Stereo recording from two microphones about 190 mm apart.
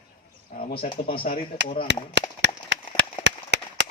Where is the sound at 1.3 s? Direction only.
35° left (ahead or behind).